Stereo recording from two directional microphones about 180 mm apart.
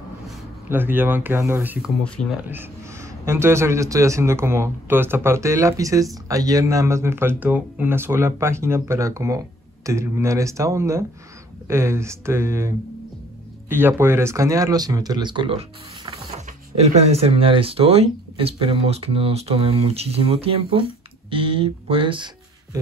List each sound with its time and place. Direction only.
0.7 s speech: 10° right (ahead or behind)
3.3 s speech: 15° right (ahead or behind)